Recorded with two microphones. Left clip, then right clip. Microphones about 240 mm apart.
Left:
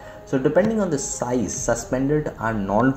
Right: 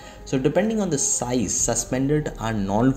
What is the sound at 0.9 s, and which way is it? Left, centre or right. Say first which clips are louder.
Speech: right 1 dB; right.